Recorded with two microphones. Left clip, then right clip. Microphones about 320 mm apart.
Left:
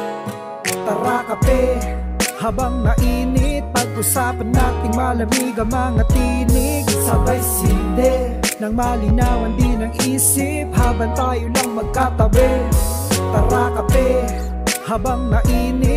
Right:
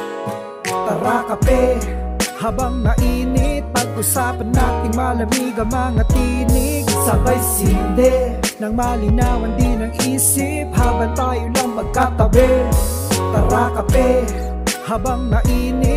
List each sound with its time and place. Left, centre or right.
0.7 s music: centre